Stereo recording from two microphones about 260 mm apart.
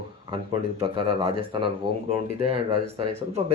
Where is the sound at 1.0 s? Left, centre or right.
Centre.